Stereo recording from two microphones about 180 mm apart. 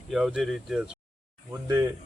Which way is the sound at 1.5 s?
15° right (ahead or behind).